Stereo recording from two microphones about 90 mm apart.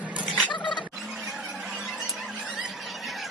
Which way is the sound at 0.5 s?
60° left (ahead or behind).